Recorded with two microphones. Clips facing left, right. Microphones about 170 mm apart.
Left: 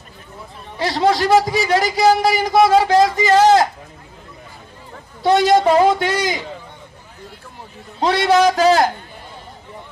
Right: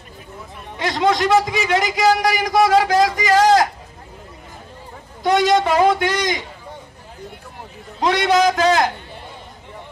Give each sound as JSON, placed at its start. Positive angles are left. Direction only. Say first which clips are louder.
{"t": 0.7, "sound": "a man's voice", "louder": "left 1 dB", "side_deg": 35}
{"t": 5.2, "sound": "a woman's voice", "louder": "left 3 dB", "side_deg": 30}
{"t": 8.0, "sound": "a man's voice", "louder": "left 2 dB", "side_deg": 30}